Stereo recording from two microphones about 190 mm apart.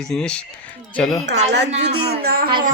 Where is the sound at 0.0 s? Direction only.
5° left (ahead or behind).